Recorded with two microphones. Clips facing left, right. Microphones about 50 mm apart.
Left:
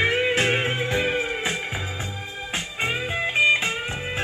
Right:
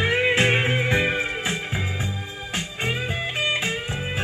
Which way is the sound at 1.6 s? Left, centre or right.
Centre.